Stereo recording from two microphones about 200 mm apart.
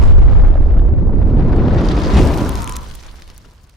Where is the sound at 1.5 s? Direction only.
Centre (ahead or behind).